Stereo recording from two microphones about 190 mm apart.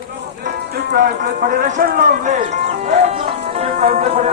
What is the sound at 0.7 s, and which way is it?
Speech, 60° right (ahead or behind).